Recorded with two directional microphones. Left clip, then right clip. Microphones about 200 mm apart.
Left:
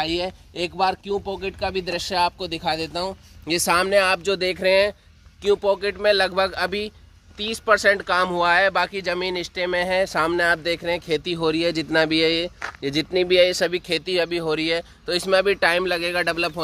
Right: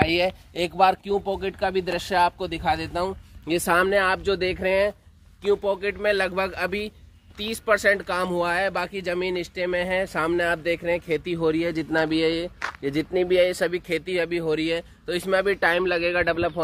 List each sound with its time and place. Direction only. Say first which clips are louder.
0.0 s speech: right 3 dB; 15° right (ahead or behind); by 1.5 s centre (ahead or behind)
1.6 s speech: left 1 dB; 15° left (ahead or behind); by 4.9 s 60° left (ahead or behind)
5.4 s a man's voice: left 3 dB; 35° left (ahead or behind); by 16.5 s 90° left